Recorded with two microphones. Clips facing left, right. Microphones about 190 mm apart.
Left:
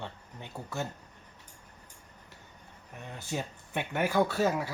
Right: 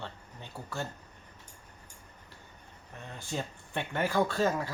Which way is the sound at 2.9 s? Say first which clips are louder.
Left 1 dB; 15° left (ahead or behind).